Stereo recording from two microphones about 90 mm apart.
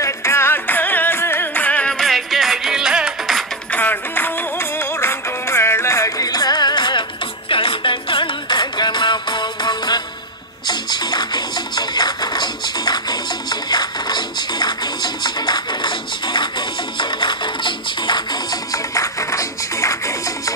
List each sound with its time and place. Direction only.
0.0 s music: 30° left (ahead or behind)
2.0 s music: centre (ahead or behind)
3.7 s music: 20° left (ahead or behind); by 20.5 s 35° left (ahead or behind)